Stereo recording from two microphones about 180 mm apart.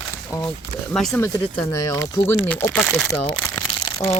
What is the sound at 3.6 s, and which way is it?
Crumpling, 15° left (ahead or behind).